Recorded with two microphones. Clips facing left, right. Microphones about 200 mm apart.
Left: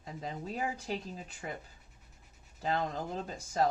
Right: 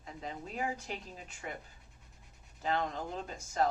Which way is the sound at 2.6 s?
35° left (ahead or behind).